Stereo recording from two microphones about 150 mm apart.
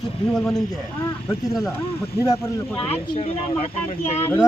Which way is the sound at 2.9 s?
40° left (ahead or behind).